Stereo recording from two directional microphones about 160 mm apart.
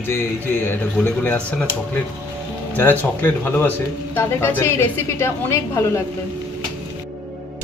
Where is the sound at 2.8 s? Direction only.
15° left (ahead or behind).